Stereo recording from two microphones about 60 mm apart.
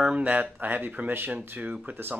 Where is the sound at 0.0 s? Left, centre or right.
Right.